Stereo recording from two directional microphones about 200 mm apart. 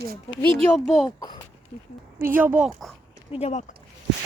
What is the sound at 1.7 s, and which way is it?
Speech, 40° left (ahead or behind).